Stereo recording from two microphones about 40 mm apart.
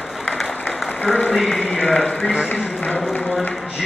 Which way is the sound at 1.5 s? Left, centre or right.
Left.